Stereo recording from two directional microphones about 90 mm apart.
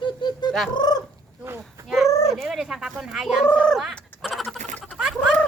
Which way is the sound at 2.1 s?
35° left (ahead or behind).